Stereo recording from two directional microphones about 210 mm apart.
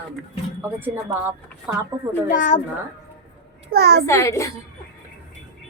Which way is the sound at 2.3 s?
40° left (ahead or behind).